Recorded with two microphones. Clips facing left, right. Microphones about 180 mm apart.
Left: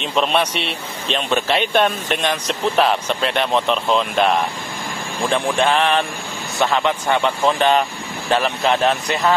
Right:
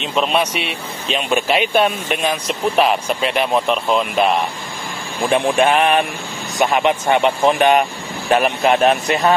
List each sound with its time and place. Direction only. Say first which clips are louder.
0.0 s a man's voice: right 1 dB; 5° right (ahead or behind)
5.3 s speech: right 3 dB; 15° right (ahead or behind)